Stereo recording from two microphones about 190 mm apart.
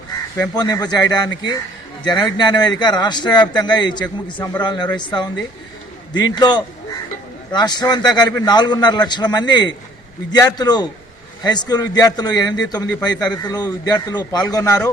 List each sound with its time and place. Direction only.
0.5 s a man's voice: 20° left (ahead or behind)